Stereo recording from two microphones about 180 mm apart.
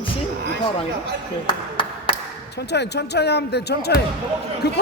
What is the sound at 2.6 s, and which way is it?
Speech, 70° left (ahead or behind).